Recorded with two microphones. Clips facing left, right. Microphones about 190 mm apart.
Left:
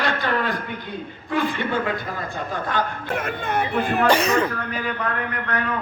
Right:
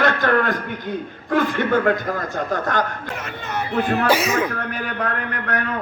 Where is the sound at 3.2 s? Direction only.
55° left (ahead or behind).